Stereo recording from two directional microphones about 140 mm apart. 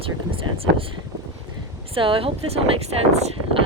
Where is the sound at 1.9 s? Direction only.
40° right (ahead or behind).